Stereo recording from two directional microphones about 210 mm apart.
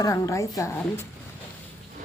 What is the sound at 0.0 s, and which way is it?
Speech, 15° left (ahead or behind).